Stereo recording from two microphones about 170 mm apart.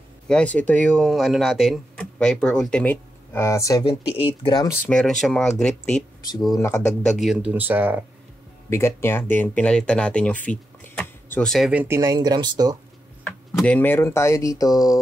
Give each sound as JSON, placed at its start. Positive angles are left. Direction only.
{"t": 0.3, "sound": "speech", "side_deg": 5}
{"t": 4.3, "sound": "speech", "side_deg": 30}
{"t": 4.8, "sound": "speech", "side_deg": 5}
{"t": 8.6, "sound": "speech", "side_deg": 15}
{"t": 13.2, "sound": "speech", "side_deg": 10}